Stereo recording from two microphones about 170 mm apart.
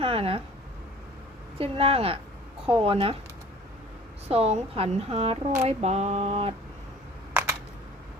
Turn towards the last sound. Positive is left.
turn(degrees=-15)  # may be behind; listen again after turning